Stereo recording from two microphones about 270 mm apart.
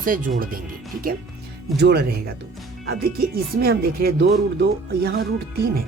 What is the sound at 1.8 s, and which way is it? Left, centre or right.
Speech, right.